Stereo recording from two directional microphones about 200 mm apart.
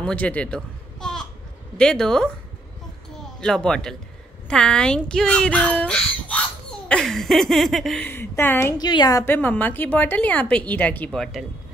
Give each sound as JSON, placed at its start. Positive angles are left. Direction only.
{"t": 0.0, "sound": "speech", "side_deg": 5}
{"t": 3.3, "sound": "speech", "side_deg": 5}